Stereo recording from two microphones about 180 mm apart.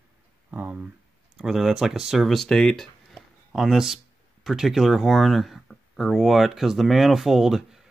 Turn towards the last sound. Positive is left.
turn(degrees=-5)  # may be behind; listen again after turning